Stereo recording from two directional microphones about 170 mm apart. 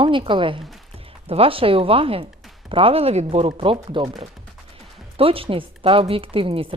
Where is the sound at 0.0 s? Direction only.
30° right (ahead or behind).